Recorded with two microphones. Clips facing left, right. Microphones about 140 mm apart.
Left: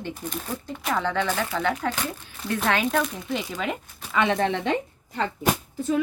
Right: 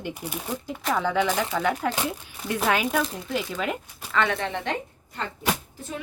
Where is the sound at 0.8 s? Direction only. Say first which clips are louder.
Even; 5° left (ahead or behind).